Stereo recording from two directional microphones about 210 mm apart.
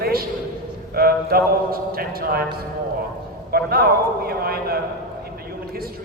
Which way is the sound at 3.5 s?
45° right (ahead or behind).